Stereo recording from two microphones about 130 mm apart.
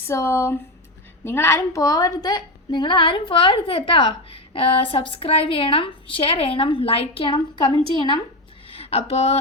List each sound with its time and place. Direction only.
0.1 s a woman's voice: 20° left (ahead or behind); by 8.2 s 40° left (ahead or behind)
8.7 s speech: 50° left (ahead or behind)